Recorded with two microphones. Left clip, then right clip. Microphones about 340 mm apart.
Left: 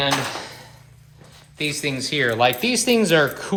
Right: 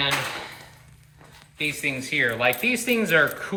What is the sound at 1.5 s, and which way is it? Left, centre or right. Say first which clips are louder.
Speech: left 2 dB; left.